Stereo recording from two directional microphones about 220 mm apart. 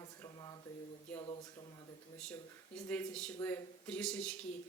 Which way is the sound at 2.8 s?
5° left (ahead or behind).